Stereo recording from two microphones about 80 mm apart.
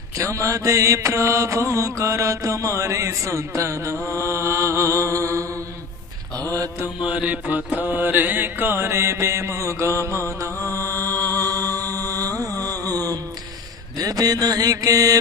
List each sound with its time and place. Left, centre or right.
0.2 s speech: right
7.0 s music: centre; by 12.7 s right
12.8 s a sound: right
13.9 s mantra: right